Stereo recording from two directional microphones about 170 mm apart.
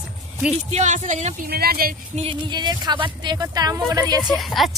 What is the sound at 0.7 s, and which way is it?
Speech, 45° right (ahead or behind).